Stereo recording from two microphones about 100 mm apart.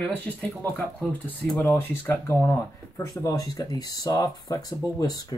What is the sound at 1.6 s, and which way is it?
Speech, 25° left (ahead or behind).